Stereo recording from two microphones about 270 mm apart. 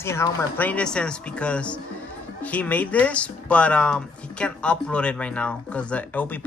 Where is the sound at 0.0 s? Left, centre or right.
Centre.